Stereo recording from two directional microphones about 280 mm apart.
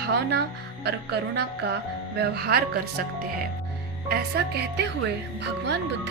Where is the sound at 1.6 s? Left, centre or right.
Right.